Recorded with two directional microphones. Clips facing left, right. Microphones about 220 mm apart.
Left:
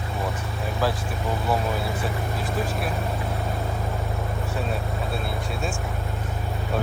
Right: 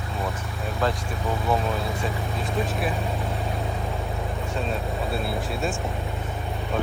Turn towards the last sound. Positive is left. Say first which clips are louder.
# right 2 dB
turn(degrees=0)  # may be behind; listen again after turning